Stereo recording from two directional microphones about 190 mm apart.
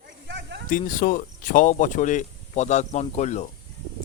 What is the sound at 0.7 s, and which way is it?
A man's voice, 45° left (ahead or behind).